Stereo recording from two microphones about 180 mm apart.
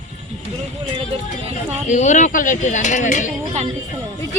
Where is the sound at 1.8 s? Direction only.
40° left (ahead or behind).